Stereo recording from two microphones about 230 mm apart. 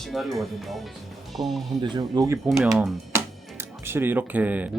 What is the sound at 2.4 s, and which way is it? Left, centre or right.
Speech, centre.